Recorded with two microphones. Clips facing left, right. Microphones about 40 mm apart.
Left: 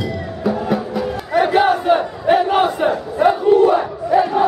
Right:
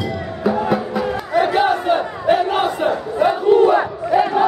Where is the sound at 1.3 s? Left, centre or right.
Centre.